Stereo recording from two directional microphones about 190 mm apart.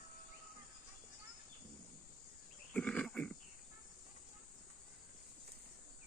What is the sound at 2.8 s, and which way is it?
Burping, 5° left (ahead or behind).